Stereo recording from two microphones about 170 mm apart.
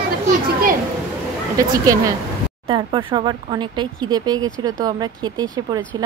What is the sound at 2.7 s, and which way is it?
Speech, 30° right (ahead or behind).